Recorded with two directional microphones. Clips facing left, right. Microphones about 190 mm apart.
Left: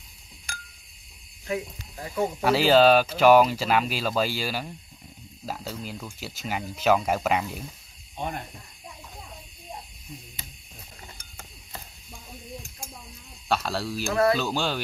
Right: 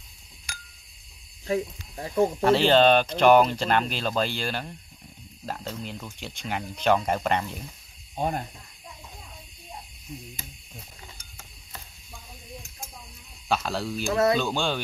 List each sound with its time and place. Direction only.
1.5 s speech: 25° right (ahead or behind)
2.4 s speech: 5° left (ahead or behind)
13.5 s speech: centre (ahead or behind)